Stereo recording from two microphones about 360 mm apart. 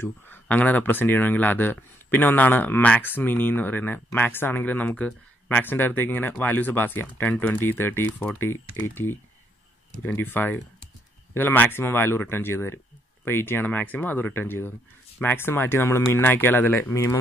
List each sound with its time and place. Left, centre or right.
0.0 s speech: centre